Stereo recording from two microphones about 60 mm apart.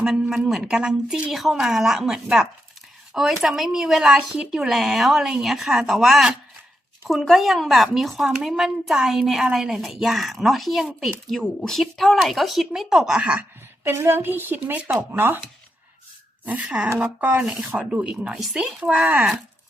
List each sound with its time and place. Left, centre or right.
0.0 s speech: centre
1.3 s a woman's voice: centre
11.3 s a woman's voice: centre
13.8 s speech: right
14.6 s speech: right
14.9 s speech: right
16.6 s speech: centre